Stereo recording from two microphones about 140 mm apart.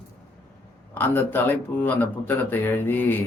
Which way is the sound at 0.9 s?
15° left (ahead or behind).